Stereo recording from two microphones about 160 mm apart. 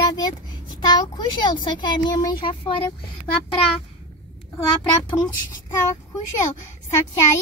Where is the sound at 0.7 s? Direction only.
30° left (ahead or behind).